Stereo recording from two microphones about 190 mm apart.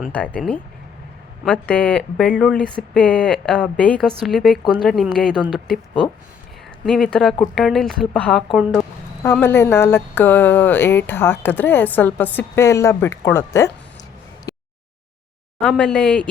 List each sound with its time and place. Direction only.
0.1 s speech: 5° left (ahead or behind)
6.8 s speech: 5° left (ahead or behind)
14.5 s a sound: 20° left (ahead or behind)
15.7 s speech: 5° left (ahead or behind)